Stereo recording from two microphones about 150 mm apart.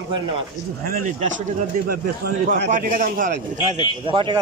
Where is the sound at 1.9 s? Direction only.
75° right (ahead or behind).